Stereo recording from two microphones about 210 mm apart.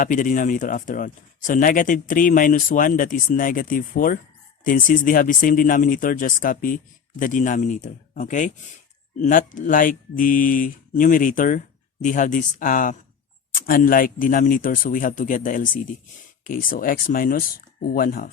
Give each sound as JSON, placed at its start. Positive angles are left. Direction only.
{"t": 0.0, "sound": "speech", "side_deg": 40}